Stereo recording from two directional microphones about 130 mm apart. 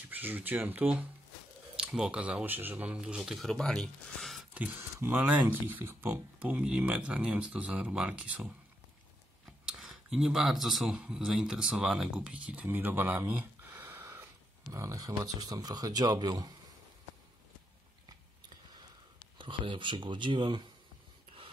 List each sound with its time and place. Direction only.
0.1 s speech: 15° right (ahead or behind); by 4.5 s centre (ahead or behind)
4.6 s speech: 10° right (ahead or behind)
9.7 s a sound: 5° right (ahead or behind)
10.1 s speech: 5° right (ahead or behind); by 16.5 s 30° right (ahead or behind)
19.3 s speech: 40° right (ahead or behind)